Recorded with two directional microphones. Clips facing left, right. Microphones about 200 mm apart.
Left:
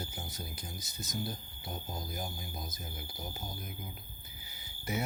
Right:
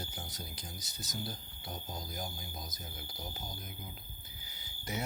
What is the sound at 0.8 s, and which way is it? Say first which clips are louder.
Speech: left 3 dB; 55° left (ahead or behind).